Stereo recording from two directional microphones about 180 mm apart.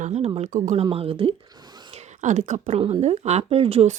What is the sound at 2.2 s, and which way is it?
Speech, 45° right (ahead or behind).